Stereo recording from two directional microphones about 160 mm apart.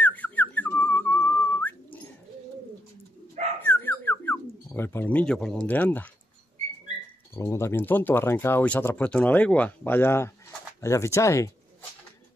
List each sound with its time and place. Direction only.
0.0 s whistling: 10° left (ahead or behind)
3.6 s bird: 10° left (ahead or behind)
7.3 s speech: 15° left (ahead or behind)